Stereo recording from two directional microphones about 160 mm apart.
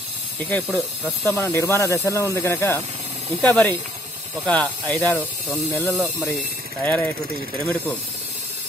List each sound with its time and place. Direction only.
0.7 s speech: 10° right (ahead or behind)
1.2 s speech: 15° left (ahead or behind)